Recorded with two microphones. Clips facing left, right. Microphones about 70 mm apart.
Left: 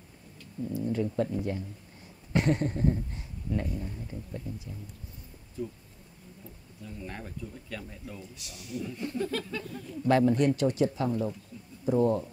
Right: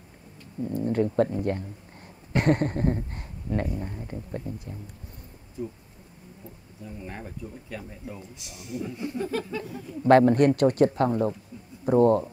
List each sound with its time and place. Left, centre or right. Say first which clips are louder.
0.6 s speech: right 5 dB; right
5.6 s speech: right 2 dB; right
6.8 s speech: right 2 dB; centre
8.9 s a sound: right 2 dB; centre
10.0 s speech: right 6 dB; right